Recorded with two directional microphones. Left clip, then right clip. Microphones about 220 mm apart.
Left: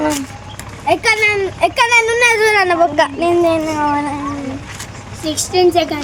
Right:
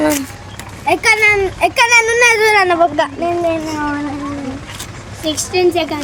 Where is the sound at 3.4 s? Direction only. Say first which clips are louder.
Left 3 dB; 40° left (ahead or behind).